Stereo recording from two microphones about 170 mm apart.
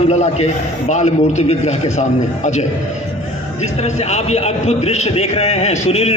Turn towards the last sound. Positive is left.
turn(degrees=40)  # may be behind; listen again after turning